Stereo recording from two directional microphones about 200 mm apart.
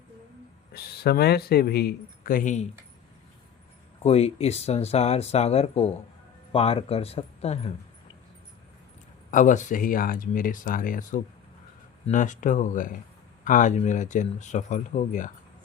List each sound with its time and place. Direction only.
0.7 s speech: 50° left (ahead or behind)
4.0 s speech: 30° left (ahead or behind)
9.3 s speech: 40° left (ahead or behind)